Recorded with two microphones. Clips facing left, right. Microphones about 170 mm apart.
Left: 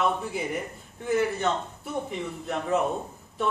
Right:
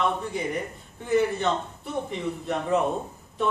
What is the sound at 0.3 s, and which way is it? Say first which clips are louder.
A man's voice: right 1 dB; 5° left (ahead or behind).